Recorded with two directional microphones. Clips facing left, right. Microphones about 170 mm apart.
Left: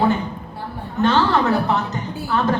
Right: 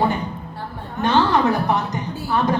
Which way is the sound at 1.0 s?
15° right (ahead or behind).